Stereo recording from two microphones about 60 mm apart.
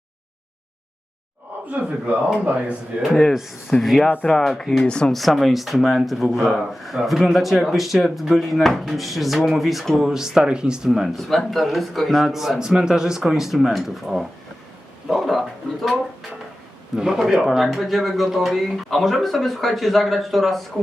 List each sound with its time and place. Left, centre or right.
2.4 s speech: right
3.0 s speech: centre
5.1 s speech: centre
6.2 s speech: centre
17.0 s speech: centre